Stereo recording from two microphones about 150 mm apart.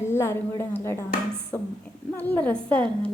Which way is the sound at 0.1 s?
15° left (ahead or behind).